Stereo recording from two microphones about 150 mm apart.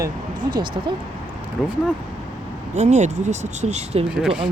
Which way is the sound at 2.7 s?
50° right (ahead or behind).